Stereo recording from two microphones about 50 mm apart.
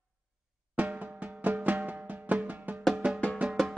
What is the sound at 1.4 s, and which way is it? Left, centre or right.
Music, right.